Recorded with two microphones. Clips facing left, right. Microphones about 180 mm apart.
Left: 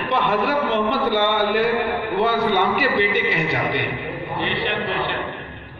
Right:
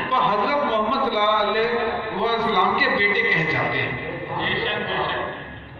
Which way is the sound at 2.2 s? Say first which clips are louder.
Left 3 dB; 60° left (ahead or behind).